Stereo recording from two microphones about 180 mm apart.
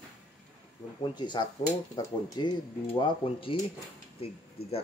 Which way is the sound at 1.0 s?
25° left (ahead or behind).